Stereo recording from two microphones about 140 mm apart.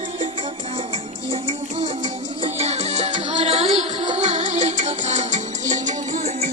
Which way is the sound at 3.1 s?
35° right (ahead or behind).